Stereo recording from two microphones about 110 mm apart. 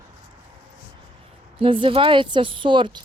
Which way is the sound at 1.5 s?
55° right (ahead or behind).